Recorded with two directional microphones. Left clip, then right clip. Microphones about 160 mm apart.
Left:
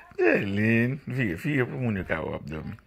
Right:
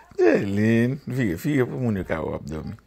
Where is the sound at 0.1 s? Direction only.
35° right (ahead or behind).